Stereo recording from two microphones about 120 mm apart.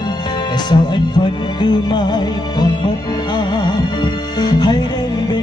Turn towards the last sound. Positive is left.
turn(degrees=40)  # may be behind; listen again after turning